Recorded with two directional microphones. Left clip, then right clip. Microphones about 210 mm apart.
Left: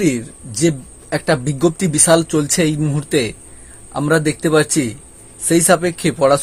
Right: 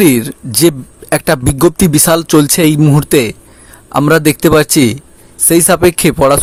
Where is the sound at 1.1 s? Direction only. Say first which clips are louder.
Right 6 dB; 30° right (ahead or behind).